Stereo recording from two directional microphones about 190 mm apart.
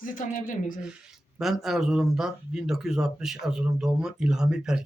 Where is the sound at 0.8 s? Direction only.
5° right (ahead or behind).